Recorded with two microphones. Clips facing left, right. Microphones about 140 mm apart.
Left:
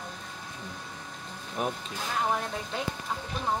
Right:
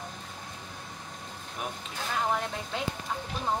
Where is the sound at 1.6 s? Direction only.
40° left (ahead or behind).